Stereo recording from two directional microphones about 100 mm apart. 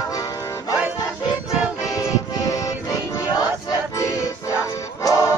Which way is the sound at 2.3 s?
30° left (ahead or behind).